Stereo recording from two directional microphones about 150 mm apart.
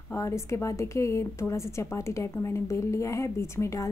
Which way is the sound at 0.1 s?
20° left (ahead or behind).